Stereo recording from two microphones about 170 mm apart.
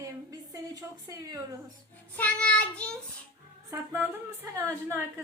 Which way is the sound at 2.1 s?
5° left (ahead or behind).